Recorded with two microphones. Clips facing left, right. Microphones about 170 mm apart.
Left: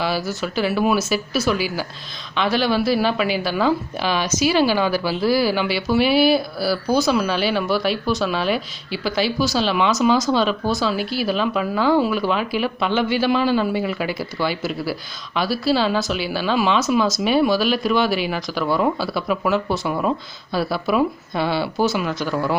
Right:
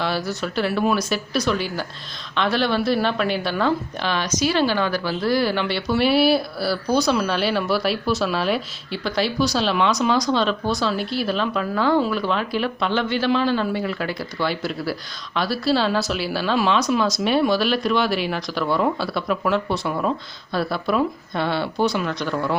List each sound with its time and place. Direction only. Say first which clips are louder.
0.0 s a woman's voice: left 1 dB; centre (ahead or behind)